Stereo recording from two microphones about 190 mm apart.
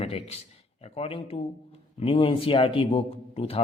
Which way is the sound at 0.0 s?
35° left (ahead or behind).